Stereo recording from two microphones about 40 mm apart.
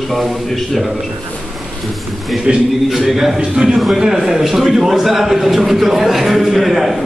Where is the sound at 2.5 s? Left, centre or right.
Right.